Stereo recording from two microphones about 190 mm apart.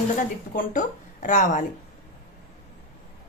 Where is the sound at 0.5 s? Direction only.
45° left (ahead or behind).